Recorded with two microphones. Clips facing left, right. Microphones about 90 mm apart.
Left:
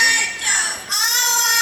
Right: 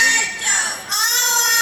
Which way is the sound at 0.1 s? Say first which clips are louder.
Even; 20° right (ahead or behind).